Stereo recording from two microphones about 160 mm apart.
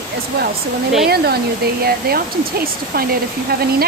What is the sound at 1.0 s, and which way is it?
Speech, 80° right.